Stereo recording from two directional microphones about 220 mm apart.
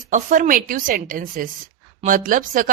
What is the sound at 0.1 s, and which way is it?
A woman's voice, 35° right (ahead or behind).